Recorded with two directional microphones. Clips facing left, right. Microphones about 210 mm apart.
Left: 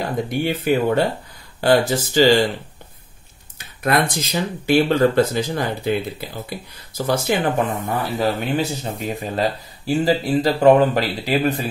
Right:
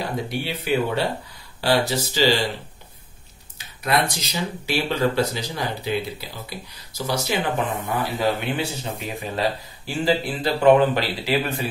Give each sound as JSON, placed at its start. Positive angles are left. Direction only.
{"t": 0.0, "sound": "speech", "side_deg": 50}
{"t": 3.5, "sound": "speech", "side_deg": 50}